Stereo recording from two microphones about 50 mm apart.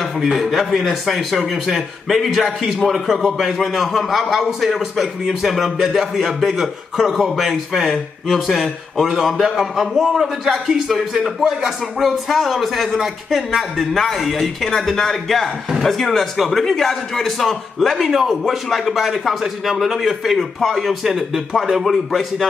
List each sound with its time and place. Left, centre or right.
0.3 s a man's voice: centre